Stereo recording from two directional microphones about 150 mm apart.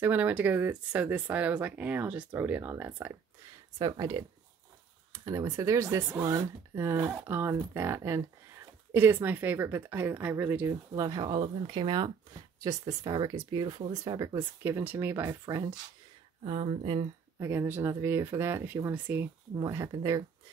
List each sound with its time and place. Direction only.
0.0 s a woman's voice: 10° right (ahead or behind)
16.4 s speech: 35° right (ahead or behind)
17.4 s a woman's voice: 15° right (ahead or behind)
19.5 s speech: 20° right (ahead or behind)